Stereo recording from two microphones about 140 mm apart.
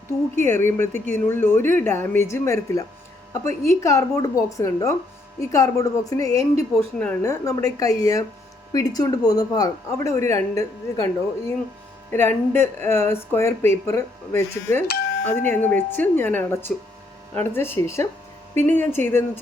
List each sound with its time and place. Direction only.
0.1 s speech: 20° left (ahead or behind)
6.7 s speech: 10° left (ahead or behind)
7.2 s speech: 25° left (ahead or behind)